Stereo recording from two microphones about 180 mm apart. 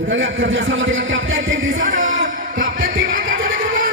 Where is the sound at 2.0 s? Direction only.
90° right.